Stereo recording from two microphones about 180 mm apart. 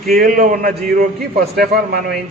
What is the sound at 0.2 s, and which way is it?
Speech, 45° right (ahead or behind).